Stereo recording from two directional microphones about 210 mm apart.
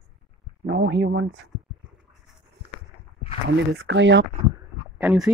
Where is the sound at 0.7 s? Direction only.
55° right (ahead or behind).